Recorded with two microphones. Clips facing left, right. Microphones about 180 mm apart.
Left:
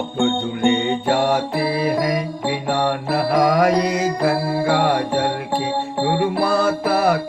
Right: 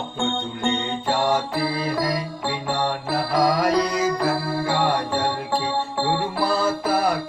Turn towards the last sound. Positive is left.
turn(degrees=70)  # may be behind; listen again after turning